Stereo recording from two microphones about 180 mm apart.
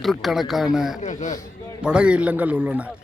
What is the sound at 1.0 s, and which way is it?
Speech, 40° left (ahead or behind).